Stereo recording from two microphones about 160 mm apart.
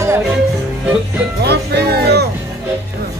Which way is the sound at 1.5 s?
90° right.